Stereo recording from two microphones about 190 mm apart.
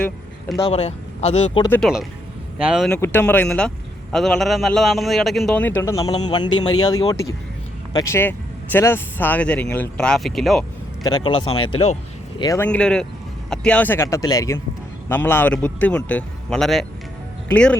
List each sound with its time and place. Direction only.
0.0 s vehicle: centre (ahead or behind)
0.6 s speech: 35° left (ahead or behind)
1.8 s speech: centre (ahead or behind)
3.0 s a man's voice: 10° left (ahead or behind)
11.0 s speech: 25° left (ahead or behind)
12.4 s a man's voice: 15° left (ahead or behind)